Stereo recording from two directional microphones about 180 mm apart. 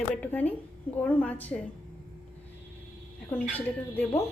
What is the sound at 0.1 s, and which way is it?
A woman's voice, 10° left (ahead or behind).